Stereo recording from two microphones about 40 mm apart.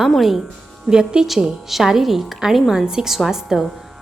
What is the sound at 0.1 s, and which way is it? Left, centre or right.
Speech, centre.